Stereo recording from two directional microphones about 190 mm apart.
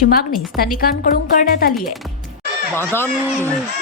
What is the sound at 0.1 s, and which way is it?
A woman's voice, 50° left (ahead or behind).